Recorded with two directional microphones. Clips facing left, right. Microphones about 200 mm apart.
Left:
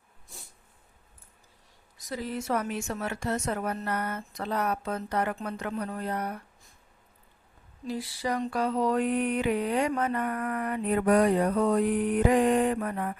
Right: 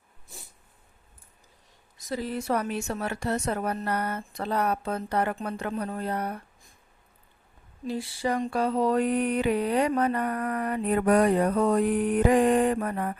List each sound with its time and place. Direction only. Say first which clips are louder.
2.0 s speech: right 3 dB; 30° right (ahead or behind)
7.9 s speech: right 3 dB; 25° right (ahead or behind)
10.9 s mantra: right 1 dB; 50° right (ahead or behind)